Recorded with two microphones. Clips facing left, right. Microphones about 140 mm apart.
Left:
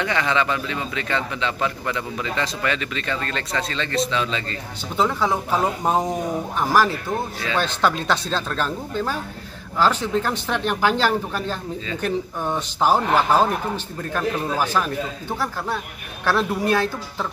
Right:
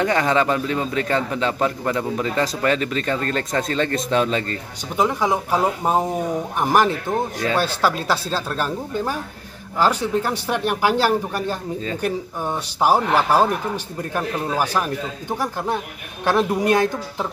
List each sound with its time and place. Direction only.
0.0 s a man's voice: 40° right (ahead or behind)
4.9 s speech: 15° right (ahead or behind)
7.5 s speech: 5° right (ahead or behind)